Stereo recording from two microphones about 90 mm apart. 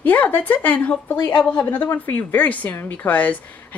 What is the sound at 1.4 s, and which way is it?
A woman's voice, 15° left (ahead or behind).